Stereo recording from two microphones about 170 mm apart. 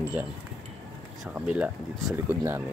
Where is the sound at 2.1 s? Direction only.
15° right (ahead or behind).